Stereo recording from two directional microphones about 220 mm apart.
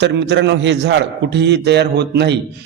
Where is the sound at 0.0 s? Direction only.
50° right (ahead or behind).